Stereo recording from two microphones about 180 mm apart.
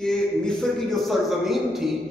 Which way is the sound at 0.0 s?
5° left (ahead or behind).